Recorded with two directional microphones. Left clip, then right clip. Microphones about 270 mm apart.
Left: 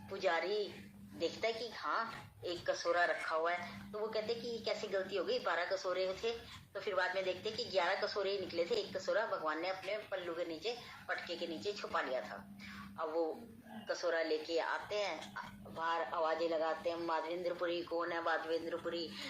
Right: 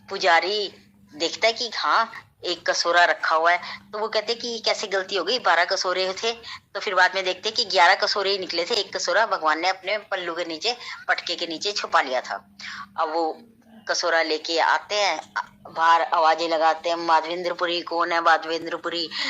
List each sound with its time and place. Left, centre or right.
0.1 s a woman's voice: right